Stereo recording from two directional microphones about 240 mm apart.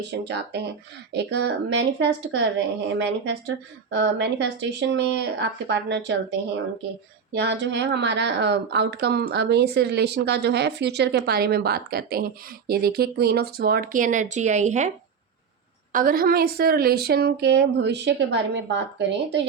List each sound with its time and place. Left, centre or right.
0.1 s speech: right
7.3 s speech: right
15.9 s speech: right